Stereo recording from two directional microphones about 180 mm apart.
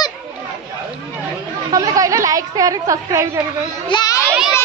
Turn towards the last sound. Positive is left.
turn(degrees=-5)  # may be behind; listen again after turning